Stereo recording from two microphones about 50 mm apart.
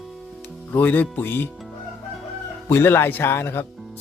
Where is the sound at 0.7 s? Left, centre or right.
Left.